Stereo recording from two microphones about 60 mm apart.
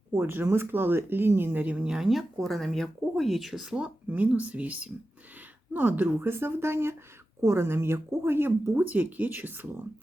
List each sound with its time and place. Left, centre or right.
0.1 s speech: right
1.6 s speech: right
1.9 s speech: centre
3.8 s a woman's voice: right